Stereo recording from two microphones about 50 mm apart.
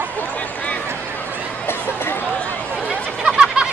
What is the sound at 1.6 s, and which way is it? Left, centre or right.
Chatter, left.